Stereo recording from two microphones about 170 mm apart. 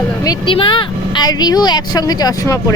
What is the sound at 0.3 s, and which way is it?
Speech, 30° left (ahead or behind).